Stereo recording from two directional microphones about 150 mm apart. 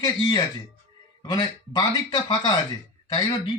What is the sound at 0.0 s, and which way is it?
Speech, 30° left (ahead or behind).